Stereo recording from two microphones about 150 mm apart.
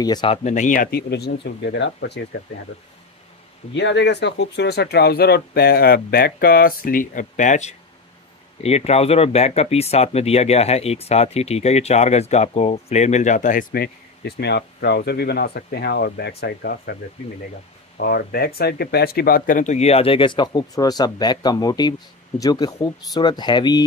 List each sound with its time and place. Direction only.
0.0 s speech: 25° left (ahead or behind)
0.3 s speech: 50° left (ahead or behind); by 1.3 s 90° left
4.6 s speech: 90° left
17.9 s speech: 90° left; by 23.8 s 30° left (ahead or behind)